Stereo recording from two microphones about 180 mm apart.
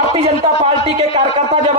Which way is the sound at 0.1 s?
30° right (ahead or behind).